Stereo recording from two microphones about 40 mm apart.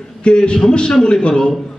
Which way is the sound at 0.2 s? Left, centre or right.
Left.